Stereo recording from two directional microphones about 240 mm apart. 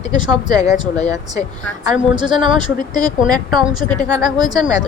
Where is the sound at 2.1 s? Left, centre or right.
Centre.